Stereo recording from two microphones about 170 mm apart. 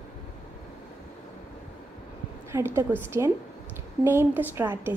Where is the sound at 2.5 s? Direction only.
15° right (ahead or behind).